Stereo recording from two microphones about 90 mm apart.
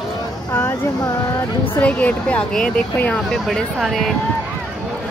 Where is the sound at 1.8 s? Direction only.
15° left (ahead or behind); by 4.1 s centre (ahead or behind).